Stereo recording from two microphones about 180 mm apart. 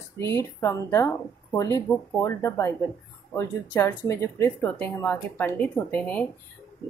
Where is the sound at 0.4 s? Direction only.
15° left (ahead or behind).